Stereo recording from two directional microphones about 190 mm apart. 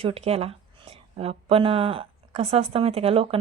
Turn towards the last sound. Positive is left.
turn(degrees=-30)  # may be behind; listen again after turning